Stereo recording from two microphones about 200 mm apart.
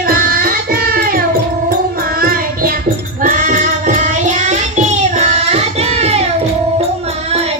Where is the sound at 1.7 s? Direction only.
45° right (ahead or behind).